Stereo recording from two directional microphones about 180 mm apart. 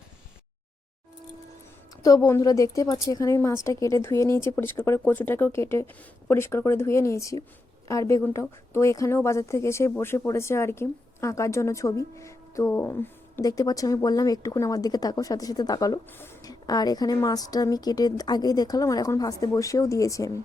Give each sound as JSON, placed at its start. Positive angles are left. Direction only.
{"t": 2.0, "sound": "a woman's voice", "side_deg": 15}